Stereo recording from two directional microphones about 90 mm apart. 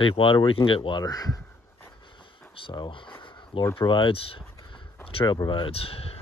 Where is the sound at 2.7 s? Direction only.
60° left (ahead or behind).